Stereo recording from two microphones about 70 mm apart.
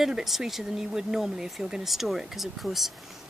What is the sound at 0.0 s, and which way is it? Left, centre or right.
Speech, centre.